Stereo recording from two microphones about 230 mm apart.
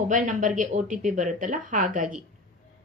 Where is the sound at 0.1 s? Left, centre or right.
Right.